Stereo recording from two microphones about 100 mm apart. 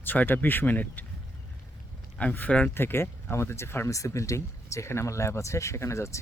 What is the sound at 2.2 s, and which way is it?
Speech, 15° left (ahead or behind).